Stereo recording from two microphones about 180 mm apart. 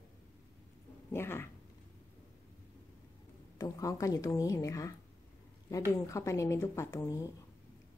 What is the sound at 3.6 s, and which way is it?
A woman's voice, 20° left (ahead or behind).